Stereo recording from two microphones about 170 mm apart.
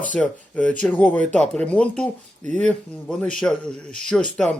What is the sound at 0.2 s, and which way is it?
Speech, 10° left (ahead or behind).